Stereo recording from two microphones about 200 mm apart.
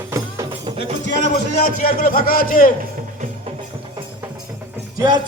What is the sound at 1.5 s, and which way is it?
A man's voice, 45° left (ahead or behind).